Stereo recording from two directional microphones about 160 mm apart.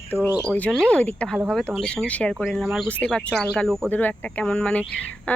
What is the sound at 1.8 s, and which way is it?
Speech, 5° left (ahead or behind).